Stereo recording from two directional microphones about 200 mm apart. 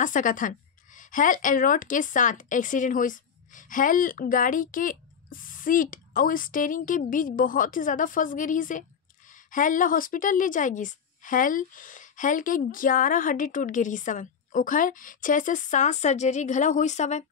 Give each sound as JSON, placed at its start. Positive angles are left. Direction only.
{"t": 0.0, "sound": "a woman's voice", "side_deg": 40}